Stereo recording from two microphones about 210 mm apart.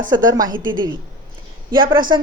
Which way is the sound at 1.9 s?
20° right (ahead or behind).